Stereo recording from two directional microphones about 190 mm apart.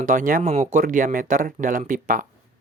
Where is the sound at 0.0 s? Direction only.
45° right (ahead or behind).